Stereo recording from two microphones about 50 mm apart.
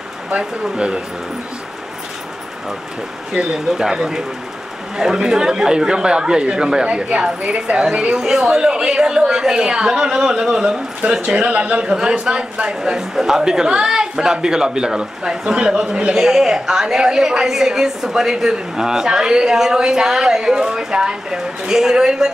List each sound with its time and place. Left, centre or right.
0.3 s speech: centre
3.5 s a man's voice: centre
11.0 s speech: right
11.9 s a man's voice: centre